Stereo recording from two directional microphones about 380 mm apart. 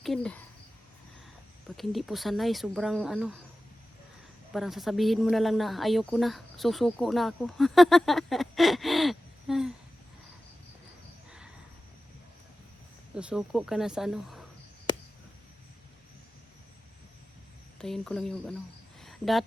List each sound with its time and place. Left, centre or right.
0.0 s speech: centre
1.7 s a woman's voice: centre
4.5 s a woman's voice: centre
13.1 s a woman's voice: centre
17.7 s a woman's voice: centre
19.0 s cricket: centre